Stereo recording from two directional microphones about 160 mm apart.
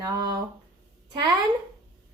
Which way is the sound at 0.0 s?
20° right (ahead or behind).